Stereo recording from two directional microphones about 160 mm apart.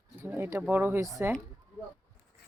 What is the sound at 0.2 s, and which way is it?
Speech, 15° right (ahead or behind).